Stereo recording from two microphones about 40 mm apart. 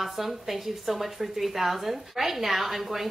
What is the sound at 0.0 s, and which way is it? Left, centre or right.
Speech, centre.